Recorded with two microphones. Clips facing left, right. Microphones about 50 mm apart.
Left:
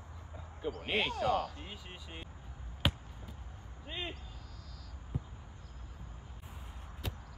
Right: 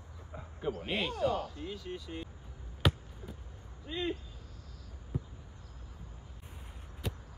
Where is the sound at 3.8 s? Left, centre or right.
Centre.